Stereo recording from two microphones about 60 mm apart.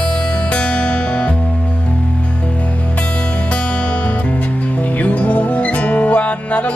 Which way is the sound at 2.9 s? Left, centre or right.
Left.